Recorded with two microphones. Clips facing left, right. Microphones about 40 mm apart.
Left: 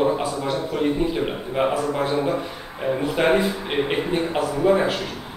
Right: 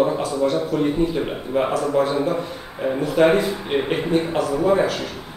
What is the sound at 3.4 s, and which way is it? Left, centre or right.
A man's voice, centre.